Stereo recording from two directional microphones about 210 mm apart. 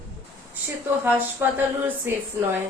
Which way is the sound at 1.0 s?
10° right (ahead or behind).